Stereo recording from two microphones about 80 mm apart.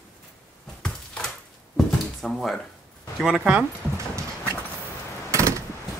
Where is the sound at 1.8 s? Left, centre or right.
Centre.